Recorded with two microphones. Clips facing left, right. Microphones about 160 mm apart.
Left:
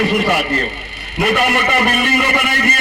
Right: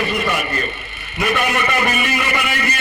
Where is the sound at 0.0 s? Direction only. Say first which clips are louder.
Left 5 dB; 70° left (ahead or behind).